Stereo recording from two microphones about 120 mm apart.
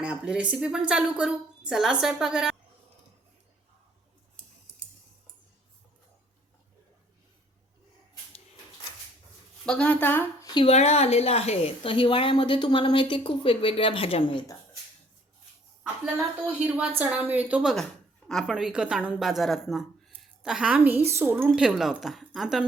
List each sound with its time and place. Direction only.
0.0 s a woman's voice: 10° right (ahead or behind)
9.6 s a woman's voice: 10° left (ahead or behind)
10.4 s a sound: 40° left (ahead or behind)
10.7 s a woman's voice: 65° left (ahead or behind); by 14.4 s 45° left (ahead or behind)
16.1 s a woman's voice: 15° right (ahead or behind)
21.5 s a woman's voice: 5° right (ahead or behind)